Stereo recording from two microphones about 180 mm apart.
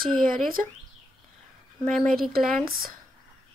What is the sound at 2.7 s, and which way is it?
Speech, 55° right (ahead or behind).